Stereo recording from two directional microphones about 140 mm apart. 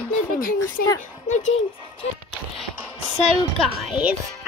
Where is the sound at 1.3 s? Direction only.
60° left (ahead or behind).